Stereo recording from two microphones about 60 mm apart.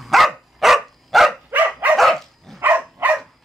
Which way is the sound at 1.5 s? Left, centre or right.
Right.